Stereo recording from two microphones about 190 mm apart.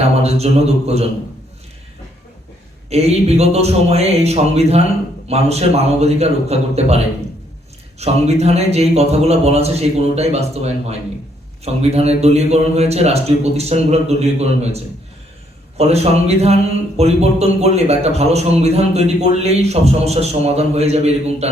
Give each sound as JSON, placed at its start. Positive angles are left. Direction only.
{"t": 0.2, "sound": "a man's voice", "side_deg": -35}
{"t": 2.9, "sound": "a man's voice", "side_deg": -35}